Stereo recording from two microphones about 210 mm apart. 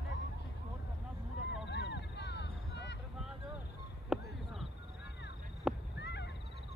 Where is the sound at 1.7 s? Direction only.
55° left (ahead or behind).